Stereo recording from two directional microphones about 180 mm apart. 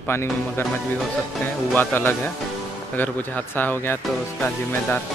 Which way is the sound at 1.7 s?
10° left (ahead or behind).